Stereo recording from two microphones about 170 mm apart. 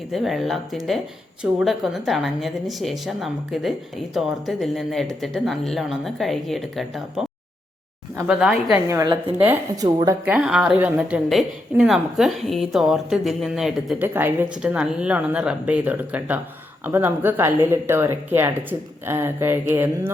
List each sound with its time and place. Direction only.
0.1 s a woman's voice: centre (ahead or behind)
8.9 s a woman's voice: 20° right (ahead or behind)
10.2 s a woman's voice: 5° right (ahead or behind)
14.1 s speech: 10° right (ahead or behind)